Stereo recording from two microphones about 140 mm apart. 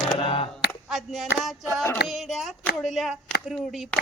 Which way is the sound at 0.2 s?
40° left (ahead or behind).